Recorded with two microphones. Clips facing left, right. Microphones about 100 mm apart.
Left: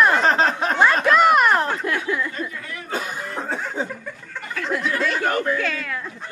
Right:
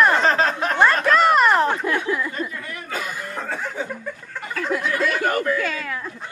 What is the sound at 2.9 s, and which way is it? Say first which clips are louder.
Chuckle: left 2 dB; 30° left (ahead or behind).